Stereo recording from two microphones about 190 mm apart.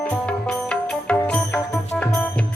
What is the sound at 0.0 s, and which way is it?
Music, 5° left (ahead or behind).